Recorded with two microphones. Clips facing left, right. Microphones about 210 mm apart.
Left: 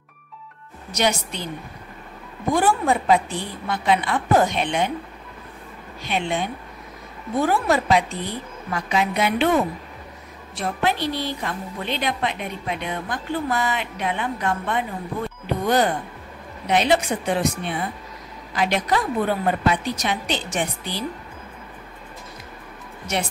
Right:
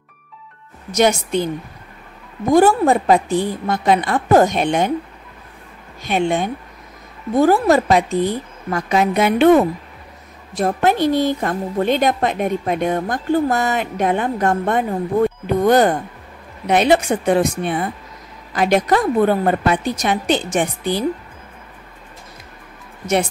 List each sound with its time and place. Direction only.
0.9 s a woman's voice: 50° right (ahead or behind)
2.5 s a woman's voice: 40° right (ahead or behind)
6.0 s a woman's voice: 45° right (ahead or behind)